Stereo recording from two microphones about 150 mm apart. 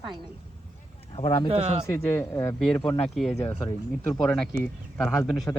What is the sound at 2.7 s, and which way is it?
A woman's voice, 5° left (ahead or behind).